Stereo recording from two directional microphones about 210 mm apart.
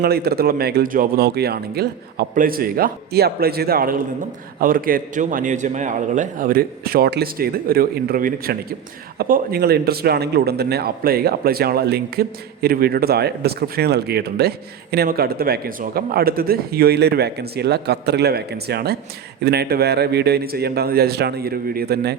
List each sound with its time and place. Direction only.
0.0 s speech: 50° right (ahead or behind)